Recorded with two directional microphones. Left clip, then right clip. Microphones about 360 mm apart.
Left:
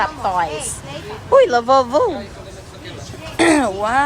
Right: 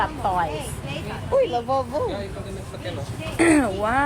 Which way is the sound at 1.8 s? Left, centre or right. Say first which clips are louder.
Left 10 dB; left.